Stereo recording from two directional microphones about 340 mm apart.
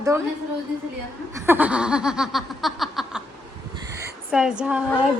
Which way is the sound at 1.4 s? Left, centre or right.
Centre.